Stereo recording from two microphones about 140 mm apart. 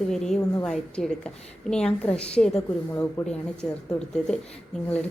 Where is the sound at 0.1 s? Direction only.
5° left (ahead or behind).